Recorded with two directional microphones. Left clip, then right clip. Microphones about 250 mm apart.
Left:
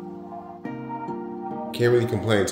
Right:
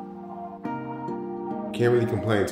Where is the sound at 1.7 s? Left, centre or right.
Centre.